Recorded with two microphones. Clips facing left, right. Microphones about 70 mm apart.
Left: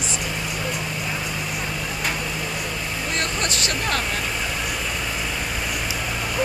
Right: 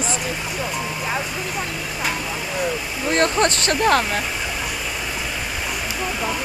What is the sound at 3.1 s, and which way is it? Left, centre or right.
Speech, right.